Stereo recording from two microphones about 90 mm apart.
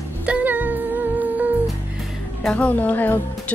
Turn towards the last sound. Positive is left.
turn(degrees=20)  # may be behind; listen again after turning